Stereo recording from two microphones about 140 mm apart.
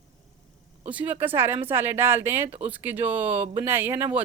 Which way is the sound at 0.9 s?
10° right (ahead or behind).